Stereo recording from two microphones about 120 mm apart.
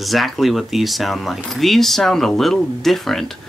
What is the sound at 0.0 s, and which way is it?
Speech, centre (ahead or behind).